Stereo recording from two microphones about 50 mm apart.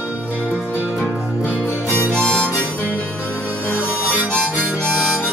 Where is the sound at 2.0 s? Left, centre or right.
Centre.